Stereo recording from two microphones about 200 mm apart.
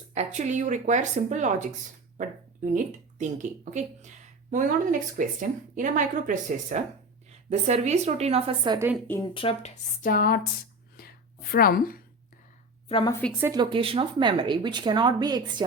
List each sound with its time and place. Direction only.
0.1 s speech: 35° right (ahead or behind)
2.7 s speech: 40° right (ahead or behind); by 8.9 s 20° right (ahead or behind)
9.0 s speech: 10° left (ahead or behind)
9.3 s speech: 30° left (ahead or behind)
10.0 s speech: 45° left (ahead or behind)
11.5 s speech: 45° left (ahead or behind)
12.9 s speech: 25° left (ahead or behind)
13.4 s speech: 20° right (ahead or behind)